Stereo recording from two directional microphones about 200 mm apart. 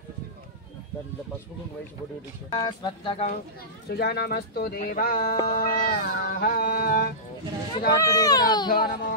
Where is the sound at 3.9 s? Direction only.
55° left (ahead or behind).